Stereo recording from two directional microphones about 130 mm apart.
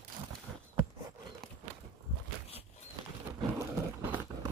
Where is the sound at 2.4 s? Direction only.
55° left (ahead or behind).